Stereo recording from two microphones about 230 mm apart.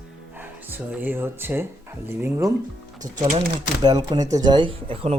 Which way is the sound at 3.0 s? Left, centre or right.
Right.